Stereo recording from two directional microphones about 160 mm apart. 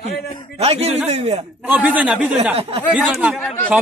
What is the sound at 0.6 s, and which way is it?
Speech, 40° right (ahead or behind).